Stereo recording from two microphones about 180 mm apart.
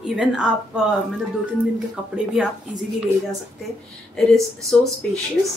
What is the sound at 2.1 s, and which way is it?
Speech, 5° right (ahead or behind).